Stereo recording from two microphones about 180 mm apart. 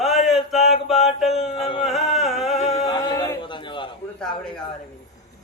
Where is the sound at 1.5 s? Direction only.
30° left (ahead or behind).